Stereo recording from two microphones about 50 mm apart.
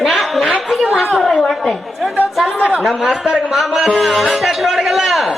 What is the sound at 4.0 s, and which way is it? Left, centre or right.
Speech, centre.